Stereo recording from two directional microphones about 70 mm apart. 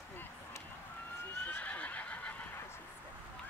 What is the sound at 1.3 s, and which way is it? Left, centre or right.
Neigh, left.